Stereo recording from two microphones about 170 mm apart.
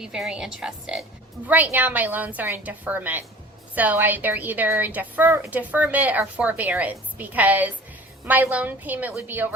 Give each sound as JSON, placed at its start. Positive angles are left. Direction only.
{"t": 0.0, "sound": "a woman's voice", "side_deg": -5}